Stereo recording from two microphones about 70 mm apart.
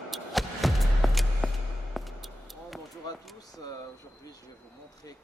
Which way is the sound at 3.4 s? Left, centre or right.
Left.